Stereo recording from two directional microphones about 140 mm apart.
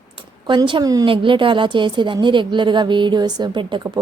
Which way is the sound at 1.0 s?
40° right (ahead or behind).